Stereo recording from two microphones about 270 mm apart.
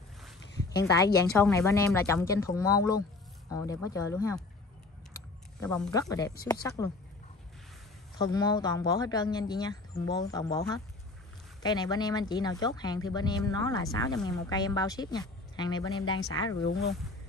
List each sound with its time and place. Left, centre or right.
0.8 s speech: centre
5.6 s speech: centre
8.2 s speech: centre
11.6 s speech: centre